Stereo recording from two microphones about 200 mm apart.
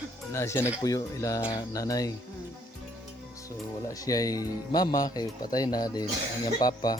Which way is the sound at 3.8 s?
15° left (ahead or behind).